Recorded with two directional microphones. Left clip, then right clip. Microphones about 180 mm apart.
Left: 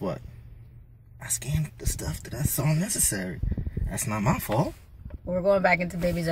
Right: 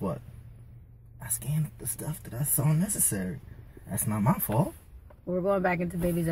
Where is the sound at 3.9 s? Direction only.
15° right (ahead or behind).